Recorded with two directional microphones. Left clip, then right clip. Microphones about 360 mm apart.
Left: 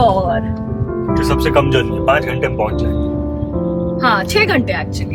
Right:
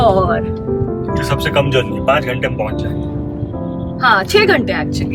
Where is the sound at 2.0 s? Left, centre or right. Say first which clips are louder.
Even; centre.